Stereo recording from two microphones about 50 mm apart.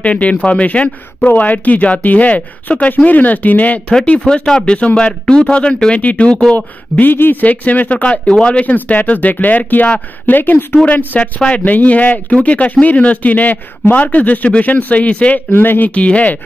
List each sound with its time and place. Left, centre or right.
0.0 s a man's voice: left
4.0 s speech: left
6.5 s a man's voice: left
8.0 s a man's voice: centre; by 10.8 s left
10.9 s a man's voice: left
15.5 s speech: left
15.9 s speech: left